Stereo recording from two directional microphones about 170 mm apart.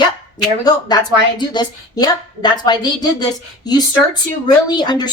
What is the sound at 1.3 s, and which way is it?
A woman's voice, 25° left (ahead or behind).